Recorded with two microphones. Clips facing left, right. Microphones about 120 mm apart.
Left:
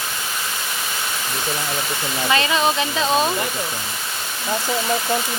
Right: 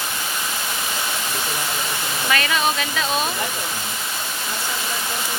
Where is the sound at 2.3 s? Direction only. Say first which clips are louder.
Left 2 dB; 25° left (ahead or behind).